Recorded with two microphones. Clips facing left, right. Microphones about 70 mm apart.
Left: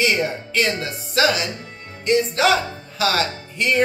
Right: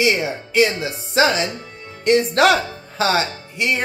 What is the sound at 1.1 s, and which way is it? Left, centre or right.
Speech, right.